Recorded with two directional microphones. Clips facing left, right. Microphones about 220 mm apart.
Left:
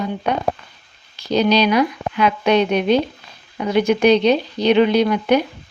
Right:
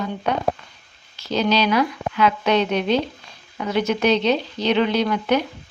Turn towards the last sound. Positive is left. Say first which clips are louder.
# left 4 dB
turn(degrees=15)  # may be behind; listen again after turning